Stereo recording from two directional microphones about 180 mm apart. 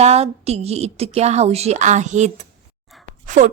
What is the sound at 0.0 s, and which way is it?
A woman's voice, 35° right (ahead or behind).